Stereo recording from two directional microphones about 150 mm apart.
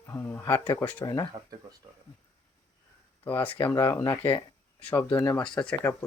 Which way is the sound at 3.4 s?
15° left (ahead or behind).